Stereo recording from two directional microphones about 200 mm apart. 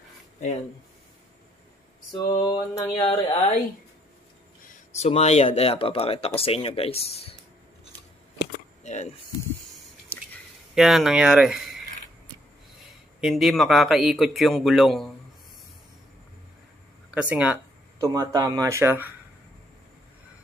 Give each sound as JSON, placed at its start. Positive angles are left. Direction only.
{"t": 2.1, "sound": "speech", "side_deg": 20}
{"t": 4.9, "sound": "speech", "side_deg": 35}
{"t": 8.8, "sound": "chop", "side_deg": 35}
{"t": 10.7, "sound": "speech", "side_deg": 0}
{"t": 13.2, "sound": "a man's voice", "side_deg": 0}
{"t": 17.1, "sound": "speech", "side_deg": -5}
{"t": 18.0, "sound": "speech", "side_deg": -15}